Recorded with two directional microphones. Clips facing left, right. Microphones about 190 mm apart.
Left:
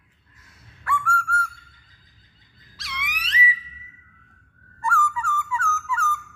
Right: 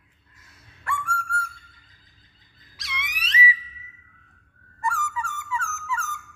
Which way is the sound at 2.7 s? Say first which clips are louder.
Left 2 dB; 20° right (ahead or behind).